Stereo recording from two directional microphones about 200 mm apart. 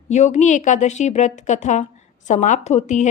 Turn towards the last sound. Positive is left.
turn(degrees=35)  # may be behind; listen again after turning